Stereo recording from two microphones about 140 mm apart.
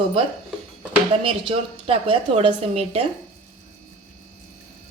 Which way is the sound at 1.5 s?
40° right (ahead or behind).